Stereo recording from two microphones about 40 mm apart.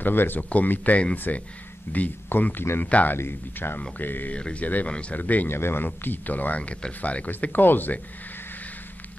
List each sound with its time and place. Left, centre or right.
0.0 s speech: left
0.4 s speech: left
2.2 s speech: left
4.3 s speech: left
5.1 s speech: left
5.5 s speech: left
6.0 s speech: left
7.2 s speech: left